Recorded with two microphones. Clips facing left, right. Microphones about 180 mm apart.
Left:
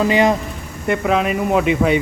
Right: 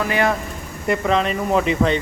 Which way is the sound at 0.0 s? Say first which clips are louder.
Left 5 dB; 20° left (ahead or behind).